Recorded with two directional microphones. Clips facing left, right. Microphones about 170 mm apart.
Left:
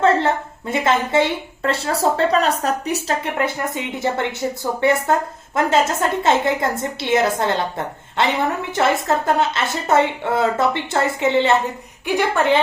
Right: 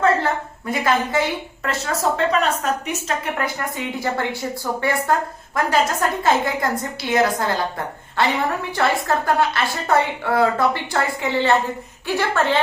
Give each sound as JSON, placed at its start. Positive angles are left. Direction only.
{"t": 0.7, "sound": "a woman's voice", "side_deg": 25}
{"t": 3.3, "sound": "a woman's voice", "side_deg": 25}